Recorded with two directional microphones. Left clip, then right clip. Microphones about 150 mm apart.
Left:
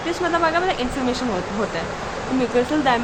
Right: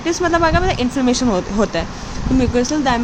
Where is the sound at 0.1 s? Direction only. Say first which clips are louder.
Right 4 dB; 75° right (ahead or behind).